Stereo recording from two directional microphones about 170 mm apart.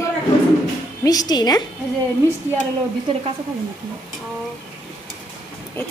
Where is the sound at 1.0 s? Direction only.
25° left (ahead or behind).